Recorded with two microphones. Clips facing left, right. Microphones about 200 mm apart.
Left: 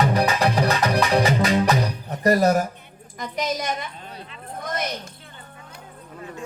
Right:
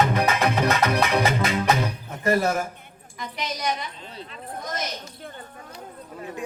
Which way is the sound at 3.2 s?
45° left (ahead or behind).